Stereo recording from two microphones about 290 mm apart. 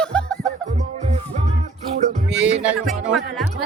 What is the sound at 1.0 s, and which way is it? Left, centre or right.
Music, right.